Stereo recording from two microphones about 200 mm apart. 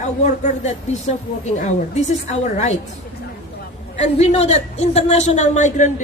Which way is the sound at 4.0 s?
35° left (ahead or behind).